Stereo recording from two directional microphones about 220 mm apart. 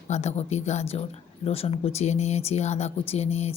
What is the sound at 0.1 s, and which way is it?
A woman's voice, 30° left (ahead or behind).